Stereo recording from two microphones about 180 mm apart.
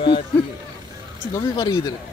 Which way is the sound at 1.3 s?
20° left (ahead or behind).